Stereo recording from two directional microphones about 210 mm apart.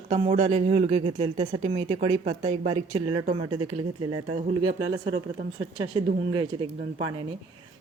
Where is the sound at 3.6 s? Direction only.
90° right.